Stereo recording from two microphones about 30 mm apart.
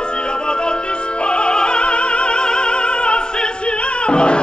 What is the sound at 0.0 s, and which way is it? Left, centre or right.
Music, left.